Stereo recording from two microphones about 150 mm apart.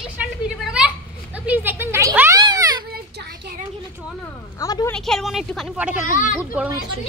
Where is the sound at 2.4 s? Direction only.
25° right (ahead or behind).